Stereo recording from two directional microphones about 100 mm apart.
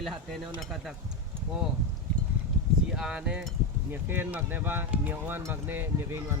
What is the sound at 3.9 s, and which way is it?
Speech, 20° right (ahead or behind).